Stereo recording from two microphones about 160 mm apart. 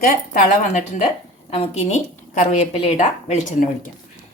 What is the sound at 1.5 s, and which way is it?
A woman's voice, 40° left (ahead or behind).